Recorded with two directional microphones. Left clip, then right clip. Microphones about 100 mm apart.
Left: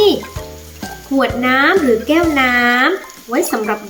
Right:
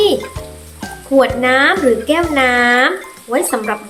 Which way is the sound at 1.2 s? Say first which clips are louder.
Right 1 dB; 30° right (ahead or behind).